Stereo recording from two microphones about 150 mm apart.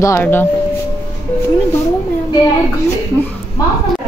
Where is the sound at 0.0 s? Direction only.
15° left (ahead or behind).